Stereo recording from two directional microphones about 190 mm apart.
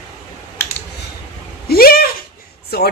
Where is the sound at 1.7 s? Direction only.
50° left (ahead or behind).